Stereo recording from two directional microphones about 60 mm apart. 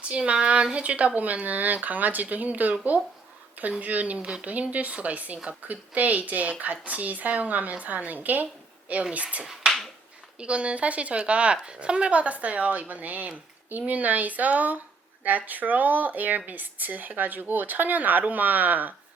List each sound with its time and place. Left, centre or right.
0.0 s speech: centre
9.4 s finger snapping: centre
10.4 s speech: centre